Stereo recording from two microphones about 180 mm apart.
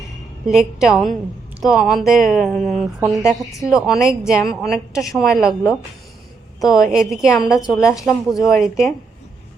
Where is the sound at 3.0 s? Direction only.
15° right (ahead or behind).